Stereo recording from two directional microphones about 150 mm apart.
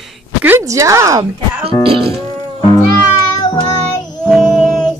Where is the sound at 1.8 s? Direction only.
35° right (ahead or behind).